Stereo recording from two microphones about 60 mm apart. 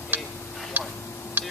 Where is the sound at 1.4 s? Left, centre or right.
Right.